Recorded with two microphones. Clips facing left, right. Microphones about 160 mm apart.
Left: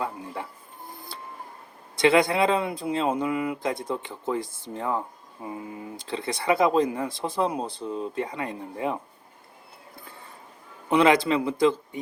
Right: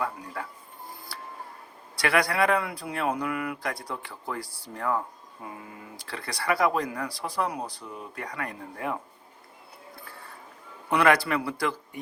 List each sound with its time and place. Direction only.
0.0 s speech: 25° left (ahead or behind)
2.0 s speech: 25° left (ahead or behind)
10.8 s speech: 20° left (ahead or behind)